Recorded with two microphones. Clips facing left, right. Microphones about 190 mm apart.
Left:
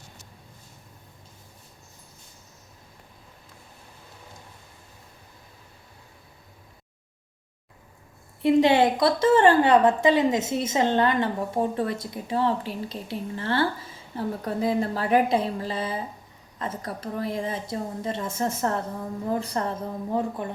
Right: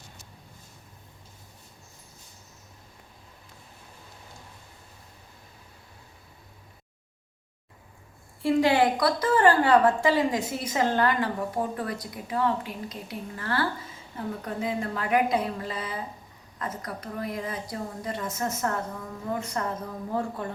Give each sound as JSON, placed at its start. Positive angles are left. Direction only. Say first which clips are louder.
{"t": 8.4, "sound": "a woman's voice", "louder": "left 3 dB", "side_deg": 20}
{"t": 20.1, "sound": "speech", "louder": "left 2 dB", "side_deg": 20}